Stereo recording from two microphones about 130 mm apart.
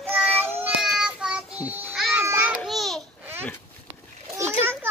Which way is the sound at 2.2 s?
15° right (ahead or behind).